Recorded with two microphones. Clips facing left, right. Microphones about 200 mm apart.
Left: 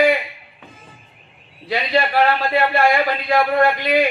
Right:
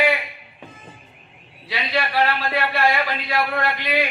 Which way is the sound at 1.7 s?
50° left (ahead or behind).